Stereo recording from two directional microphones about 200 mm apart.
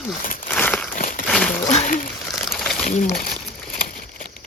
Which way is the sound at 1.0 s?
40° left (ahead or behind).